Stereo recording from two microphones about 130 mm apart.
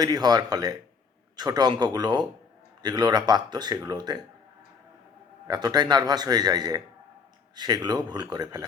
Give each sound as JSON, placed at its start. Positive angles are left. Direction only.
{"t": 0.0, "sound": "speech", "side_deg": -30}
{"t": 5.5, "sound": "speech", "side_deg": -35}